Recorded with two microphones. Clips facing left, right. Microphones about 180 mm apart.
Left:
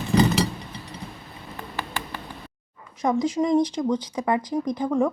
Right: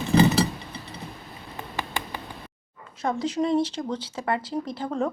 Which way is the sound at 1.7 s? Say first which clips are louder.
Right 1 dB; 15° right (ahead or behind).